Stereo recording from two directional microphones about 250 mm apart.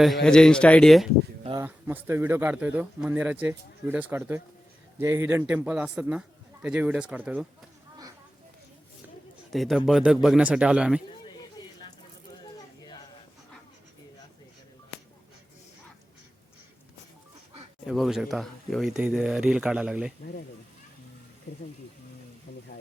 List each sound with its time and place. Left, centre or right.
0.0 s a man's voice: centre
1.5 s a man's voice: centre
9.5 s a man's voice: centre
12.4 s a sound: centre
17.8 s a man's voice: centre